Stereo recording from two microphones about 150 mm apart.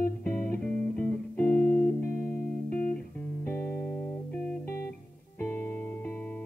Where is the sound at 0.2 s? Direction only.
10° left (ahead or behind).